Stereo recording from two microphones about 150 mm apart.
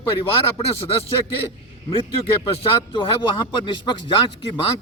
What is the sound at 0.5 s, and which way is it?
Speech, 40° left (ahead or behind).